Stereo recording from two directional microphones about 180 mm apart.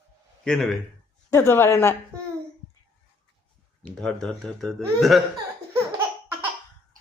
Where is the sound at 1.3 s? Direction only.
15° left (ahead or behind).